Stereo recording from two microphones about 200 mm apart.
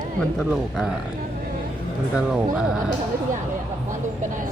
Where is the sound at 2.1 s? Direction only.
5° right (ahead or behind).